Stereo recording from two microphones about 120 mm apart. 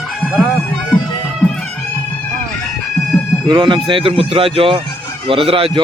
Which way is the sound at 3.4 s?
40° right (ahead or behind).